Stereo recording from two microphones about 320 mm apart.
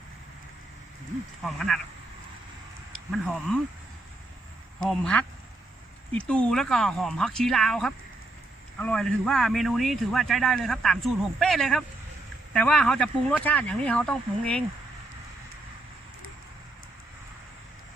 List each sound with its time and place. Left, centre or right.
1.5 s speech: centre
3.1 s speech: centre
4.9 s speech: centre